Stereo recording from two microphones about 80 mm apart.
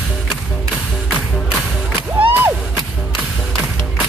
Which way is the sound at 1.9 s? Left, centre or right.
Right.